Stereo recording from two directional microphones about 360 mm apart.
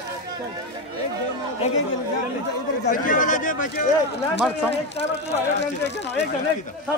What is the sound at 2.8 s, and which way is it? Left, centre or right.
Speech, left.